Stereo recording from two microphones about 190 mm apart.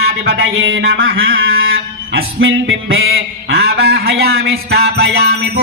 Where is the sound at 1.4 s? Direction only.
55° right (ahead or behind).